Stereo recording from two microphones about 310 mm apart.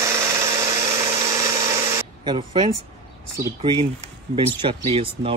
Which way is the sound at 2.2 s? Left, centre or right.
Centre.